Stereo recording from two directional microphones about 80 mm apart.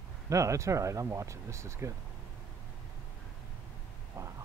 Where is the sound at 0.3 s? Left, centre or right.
Right.